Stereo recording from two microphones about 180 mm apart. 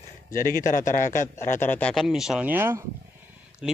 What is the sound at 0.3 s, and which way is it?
A man's voice, 50° left (ahead or behind).